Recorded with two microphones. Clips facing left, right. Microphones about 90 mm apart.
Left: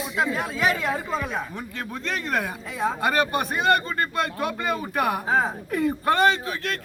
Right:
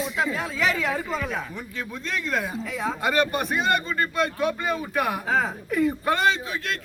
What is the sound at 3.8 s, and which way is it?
A man's voice, 50° left (ahead or behind).